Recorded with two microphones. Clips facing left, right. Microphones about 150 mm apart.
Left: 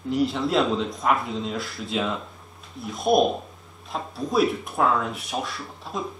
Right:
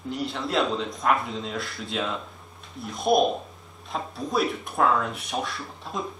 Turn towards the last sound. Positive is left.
turn(degrees=0)  # may be behind; listen again after turning